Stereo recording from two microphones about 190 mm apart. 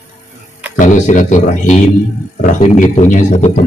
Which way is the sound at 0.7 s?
40° left (ahead or behind).